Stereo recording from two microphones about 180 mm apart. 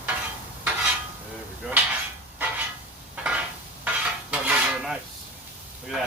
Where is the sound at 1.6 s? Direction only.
5° right (ahead or behind).